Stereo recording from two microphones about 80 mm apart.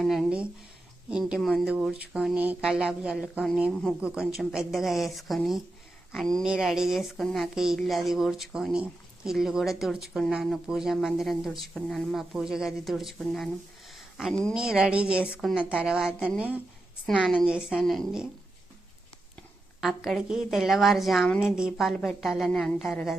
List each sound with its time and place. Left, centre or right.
0.0 s a woman's voice: centre
4.3 s speech: centre
13.9 s a sound: centre
14.5 s a woman's voice: centre
17.1 s speech: centre
17.4 s a woman's voice: centre
17.7 s speech: centre
19.8 s a woman's voice: centre